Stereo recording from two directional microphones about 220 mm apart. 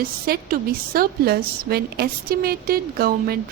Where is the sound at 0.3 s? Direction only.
40° right (ahead or behind).